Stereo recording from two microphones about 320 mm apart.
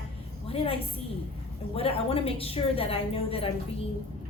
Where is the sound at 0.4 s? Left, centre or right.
Centre.